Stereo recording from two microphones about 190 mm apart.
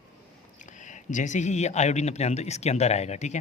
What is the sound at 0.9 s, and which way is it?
Speech, 40° left (ahead or behind).